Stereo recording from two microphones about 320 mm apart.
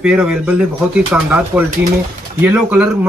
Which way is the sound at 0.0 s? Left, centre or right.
Centre.